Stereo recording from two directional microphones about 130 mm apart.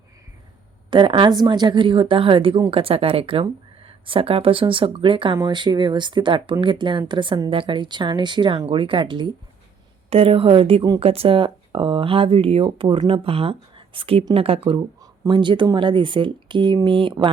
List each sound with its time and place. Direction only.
0.9 s speech: 40° right (ahead or behind)